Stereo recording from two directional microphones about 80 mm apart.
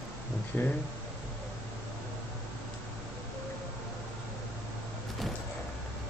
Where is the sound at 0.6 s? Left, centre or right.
Left.